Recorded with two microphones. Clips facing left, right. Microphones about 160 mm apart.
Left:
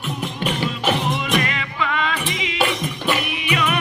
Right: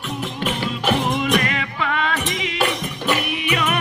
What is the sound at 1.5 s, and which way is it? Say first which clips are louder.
Music: right 1 dB; 50° right (ahead or behind).